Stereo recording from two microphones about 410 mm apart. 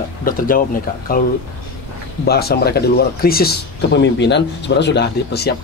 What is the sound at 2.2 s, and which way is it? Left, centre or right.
Speech, left.